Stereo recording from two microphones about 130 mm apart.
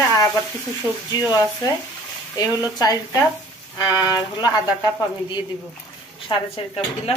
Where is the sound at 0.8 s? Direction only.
15° right (ahead or behind).